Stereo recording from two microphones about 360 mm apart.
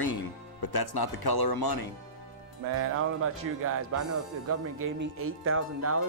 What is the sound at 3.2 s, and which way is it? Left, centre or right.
Speech, right.